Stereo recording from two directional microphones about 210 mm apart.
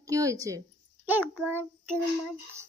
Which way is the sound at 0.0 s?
15° right (ahead or behind).